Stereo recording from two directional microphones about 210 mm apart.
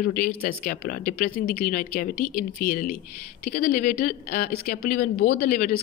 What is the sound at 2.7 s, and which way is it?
Speech, 40° left (ahead or behind).